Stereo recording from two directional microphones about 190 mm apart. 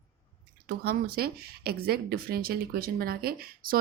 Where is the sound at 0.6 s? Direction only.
55° right (ahead or behind).